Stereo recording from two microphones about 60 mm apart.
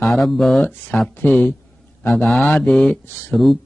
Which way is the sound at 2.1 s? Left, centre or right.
Centre.